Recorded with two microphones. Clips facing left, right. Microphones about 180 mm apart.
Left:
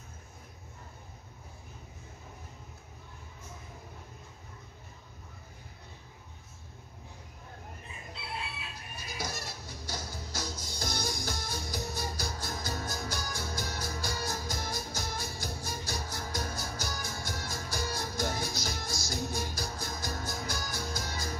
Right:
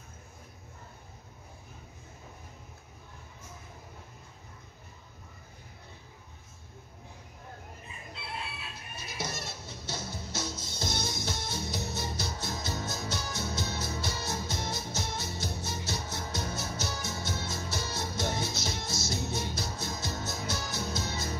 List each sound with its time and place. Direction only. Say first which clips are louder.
8.9 s music: right 1 dB; 25° right (ahead or behind)